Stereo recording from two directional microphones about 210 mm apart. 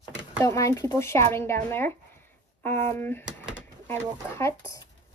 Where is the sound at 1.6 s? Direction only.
10° left (ahead or behind).